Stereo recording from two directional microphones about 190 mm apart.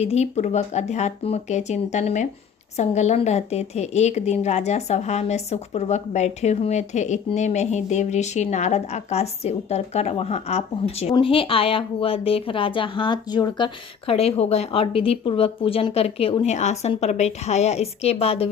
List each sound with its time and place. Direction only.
0.0 s a woman's voice: 35° left (ahead or behind)